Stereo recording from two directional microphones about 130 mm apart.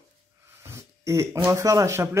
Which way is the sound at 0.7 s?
20° right (ahead or behind).